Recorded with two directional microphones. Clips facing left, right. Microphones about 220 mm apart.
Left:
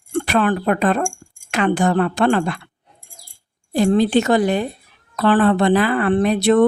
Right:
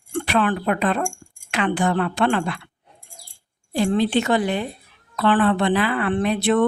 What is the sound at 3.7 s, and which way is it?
A woman's voice, 45° left (ahead or behind).